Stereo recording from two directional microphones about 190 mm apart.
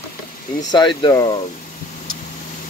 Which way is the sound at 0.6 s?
25° left (ahead or behind).